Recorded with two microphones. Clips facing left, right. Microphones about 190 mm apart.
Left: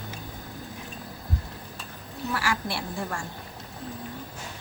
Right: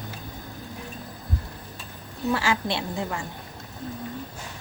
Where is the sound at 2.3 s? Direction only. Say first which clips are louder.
Right 4 dB; 25° right (ahead or behind).